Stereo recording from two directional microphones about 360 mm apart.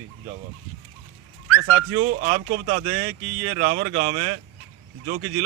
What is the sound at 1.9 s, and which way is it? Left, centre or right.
A man's voice, centre.